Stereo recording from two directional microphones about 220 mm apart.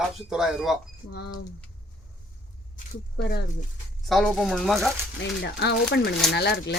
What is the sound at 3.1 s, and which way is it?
Speech, 50° left (ahead or behind).